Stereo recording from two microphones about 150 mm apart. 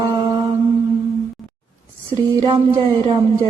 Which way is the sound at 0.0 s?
35° right (ahead or behind).